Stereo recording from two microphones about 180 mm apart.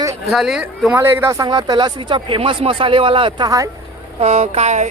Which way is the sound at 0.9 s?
15° right (ahead or behind).